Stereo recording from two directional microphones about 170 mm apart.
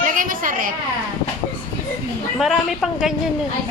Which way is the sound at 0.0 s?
50° right (ahead or behind).